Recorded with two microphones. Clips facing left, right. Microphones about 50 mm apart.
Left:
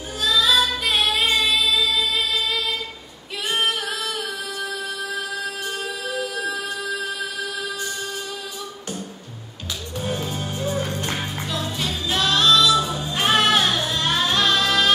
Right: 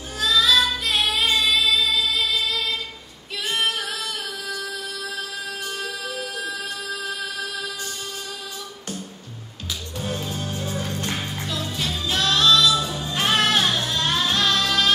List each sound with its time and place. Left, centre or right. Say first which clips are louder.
0.4 s singing: even; centre
0.9 s music: left 2 dB; centre
1.2 s music: even; left
9.9 s music: left 3 dB; left